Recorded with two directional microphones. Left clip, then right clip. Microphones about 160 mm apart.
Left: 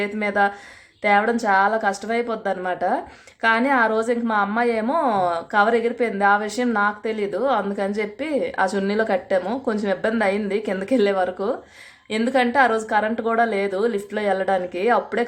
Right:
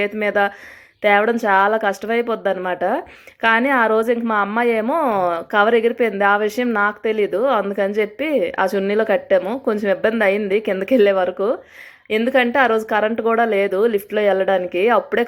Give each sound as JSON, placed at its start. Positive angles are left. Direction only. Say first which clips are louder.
{"t": 0.0, "sound": "a woman's voice", "louder": "right 3 dB", "side_deg": -20}